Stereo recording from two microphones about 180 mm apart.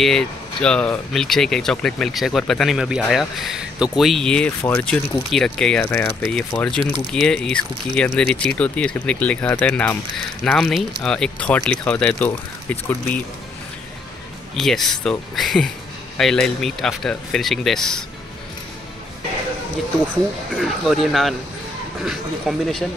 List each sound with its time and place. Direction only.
0.0 s speech: 5° left (ahead or behind)
14.5 s speech: centre (ahead or behind)
20.5 s speech: centre (ahead or behind)